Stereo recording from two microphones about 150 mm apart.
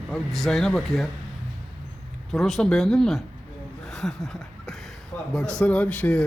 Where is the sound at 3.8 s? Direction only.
Centre (ahead or behind).